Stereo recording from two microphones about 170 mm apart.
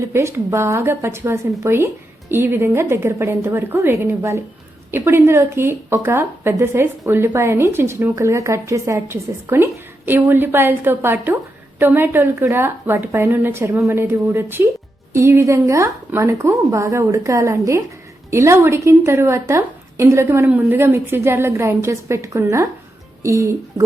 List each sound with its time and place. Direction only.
0.0 s a woman's voice: 15° right (ahead or behind)